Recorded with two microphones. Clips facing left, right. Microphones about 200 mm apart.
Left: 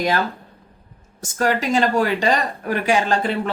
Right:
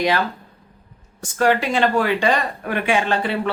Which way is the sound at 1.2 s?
45° left (ahead or behind).